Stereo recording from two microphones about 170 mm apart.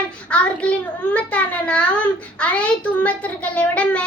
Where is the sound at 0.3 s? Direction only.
5° left (ahead or behind).